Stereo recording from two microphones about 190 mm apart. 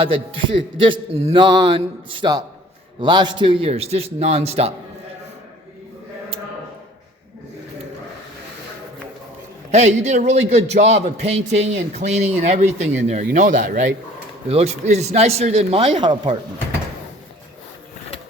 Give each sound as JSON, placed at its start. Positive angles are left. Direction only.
{"t": 0.0, "sound": "a man's voice", "side_deg": -30}
{"t": 9.7, "sound": "a man's voice", "side_deg": -35}